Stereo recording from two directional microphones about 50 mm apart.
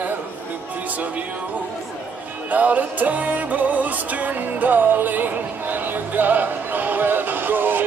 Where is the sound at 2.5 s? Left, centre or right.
Right.